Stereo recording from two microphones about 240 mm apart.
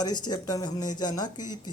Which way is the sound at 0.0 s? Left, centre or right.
Centre.